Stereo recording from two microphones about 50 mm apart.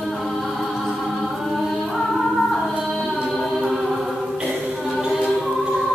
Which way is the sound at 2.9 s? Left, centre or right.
Centre.